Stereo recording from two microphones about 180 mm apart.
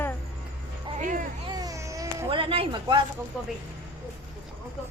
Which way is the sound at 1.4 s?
20° right (ahead or behind).